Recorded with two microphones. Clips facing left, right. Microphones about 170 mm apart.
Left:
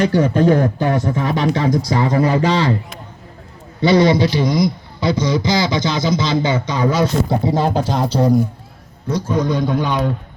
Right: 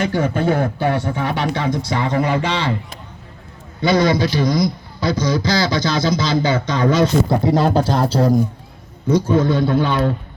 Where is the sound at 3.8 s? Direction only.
30° left (ahead or behind); by 7.0 s 10° left (ahead or behind).